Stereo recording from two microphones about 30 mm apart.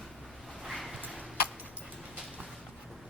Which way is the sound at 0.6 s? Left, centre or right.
Centre.